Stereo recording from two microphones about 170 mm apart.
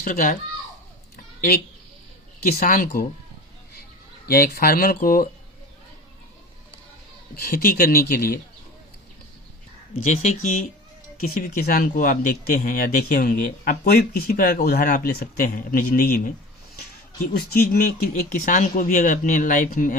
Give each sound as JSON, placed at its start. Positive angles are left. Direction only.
{"t": 0.0, "sound": "speech", "side_deg": 55}
{"t": 1.1, "sound": "a sound", "side_deg": 60}
{"t": 2.4, "sound": "speech", "side_deg": 60}
{"t": 4.3, "sound": "speech", "side_deg": 65}
{"t": 7.3, "sound": "speech", "side_deg": 60}
{"t": 10.0, "sound": "speech", "side_deg": 45}
{"t": 11.2, "sound": "speech", "side_deg": 60}
{"t": 17.3, "sound": "speech", "side_deg": 65}
{"t": 18.1, "sound": "speech", "side_deg": 50}